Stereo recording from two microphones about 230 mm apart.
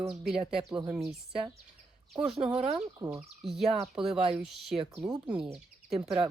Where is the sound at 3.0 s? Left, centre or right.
Centre.